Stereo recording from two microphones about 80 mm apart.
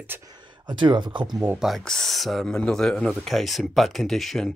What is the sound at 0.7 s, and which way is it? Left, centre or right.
Speech, right.